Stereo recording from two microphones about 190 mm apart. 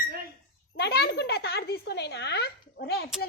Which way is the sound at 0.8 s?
55° left (ahead or behind).